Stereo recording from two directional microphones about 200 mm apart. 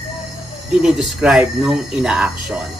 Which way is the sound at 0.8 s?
5° right (ahead or behind).